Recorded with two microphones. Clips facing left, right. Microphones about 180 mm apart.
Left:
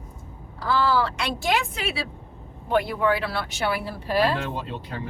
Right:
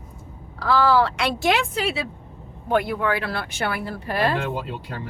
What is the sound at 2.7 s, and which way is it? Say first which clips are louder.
Speech: even; 55° right (ahead or behind).